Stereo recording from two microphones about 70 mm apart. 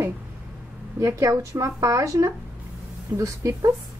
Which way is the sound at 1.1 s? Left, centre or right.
Right.